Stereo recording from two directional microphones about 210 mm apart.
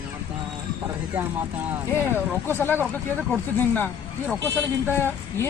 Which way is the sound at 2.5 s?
10° left (ahead or behind).